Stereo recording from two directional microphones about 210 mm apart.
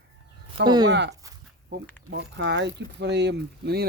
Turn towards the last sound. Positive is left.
turn(degrees=-50)  # may be behind; listen again after turning